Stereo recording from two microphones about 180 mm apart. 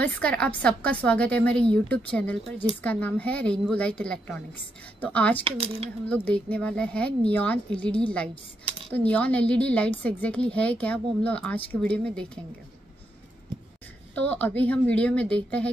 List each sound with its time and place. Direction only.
0.0 s a woman's voice: 5° left (ahead or behind)
5.4 s speech: 30° right (ahead or behind)
6.0 s a woman's voice: 10° left (ahead or behind)
14.1 s a woman's voice: 10° left (ahead or behind)